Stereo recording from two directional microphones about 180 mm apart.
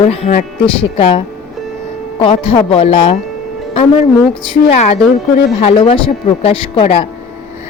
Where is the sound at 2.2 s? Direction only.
30° left (ahead or behind).